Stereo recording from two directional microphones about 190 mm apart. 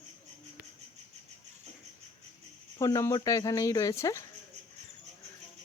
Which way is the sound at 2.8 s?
15° left (ahead or behind).